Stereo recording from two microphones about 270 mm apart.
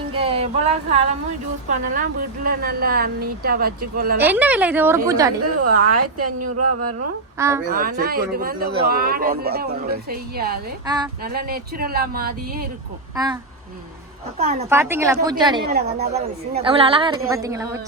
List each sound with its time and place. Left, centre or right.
0.1 s a sound: centre
1.7 s speech: right
4.2 s a woman's voice: centre
5.5 s speech: right
7.3 s a woman's voice: centre
7.7 s speech: right
10.8 s a woman's voice: centre
11.2 s speech: right
13.1 s a woman's voice: centre
14.7 s a woman's voice: centre